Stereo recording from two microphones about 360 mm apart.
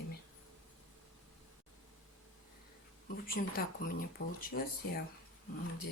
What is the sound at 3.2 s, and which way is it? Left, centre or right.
Speech, left.